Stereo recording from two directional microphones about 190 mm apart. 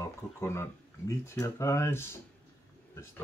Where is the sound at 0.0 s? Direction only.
15° left (ahead or behind).